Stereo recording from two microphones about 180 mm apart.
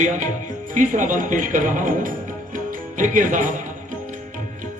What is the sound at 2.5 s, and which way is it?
Music, 45° right (ahead or behind).